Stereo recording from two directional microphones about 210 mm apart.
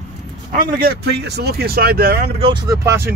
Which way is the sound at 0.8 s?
50° right (ahead or behind).